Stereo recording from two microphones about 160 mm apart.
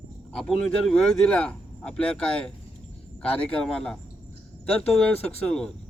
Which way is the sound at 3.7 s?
5° left (ahead or behind).